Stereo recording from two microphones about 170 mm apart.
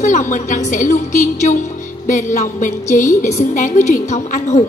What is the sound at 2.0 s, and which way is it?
Speech, 45° left (ahead or behind).